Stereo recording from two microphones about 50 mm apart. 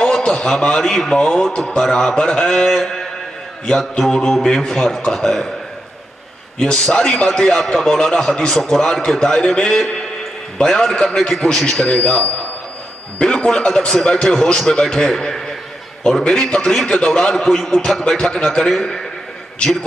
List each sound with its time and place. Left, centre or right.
0.0 s a man's voice: centre
4.1 s a man's voice: centre
6.6 s a man's voice: centre